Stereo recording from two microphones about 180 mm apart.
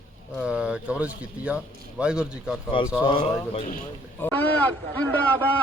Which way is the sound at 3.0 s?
30° left (ahead or behind).